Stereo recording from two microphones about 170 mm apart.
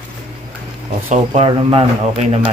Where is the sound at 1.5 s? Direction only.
30° right (ahead or behind).